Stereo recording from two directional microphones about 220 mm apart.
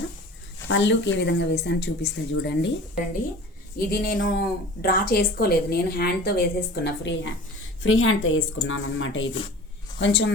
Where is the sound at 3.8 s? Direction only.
40° left (ahead or behind).